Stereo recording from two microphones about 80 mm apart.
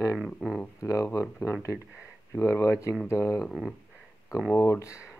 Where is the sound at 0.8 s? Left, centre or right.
Left.